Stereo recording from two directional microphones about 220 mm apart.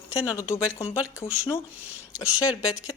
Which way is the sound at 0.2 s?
10° left (ahead or behind).